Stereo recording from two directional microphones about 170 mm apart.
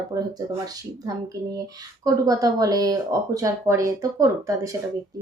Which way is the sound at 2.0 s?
20° right (ahead or behind).